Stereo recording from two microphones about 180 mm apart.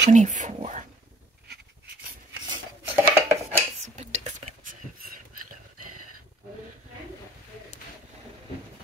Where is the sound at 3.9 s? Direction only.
40° right (ahead or behind).